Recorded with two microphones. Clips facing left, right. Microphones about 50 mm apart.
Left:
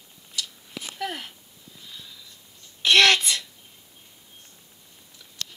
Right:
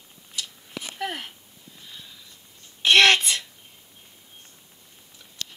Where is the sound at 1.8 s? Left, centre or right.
Right.